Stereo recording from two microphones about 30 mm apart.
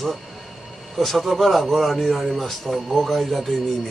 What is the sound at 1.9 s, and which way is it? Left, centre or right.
Speech, centre.